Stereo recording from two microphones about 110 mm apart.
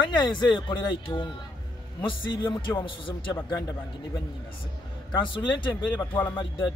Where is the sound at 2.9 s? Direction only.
50° left (ahead or behind).